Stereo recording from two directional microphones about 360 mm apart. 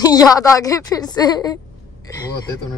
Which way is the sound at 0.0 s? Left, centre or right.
Centre.